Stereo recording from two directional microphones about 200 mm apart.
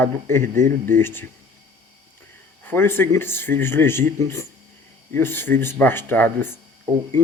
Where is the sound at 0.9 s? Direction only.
10° left (ahead or behind).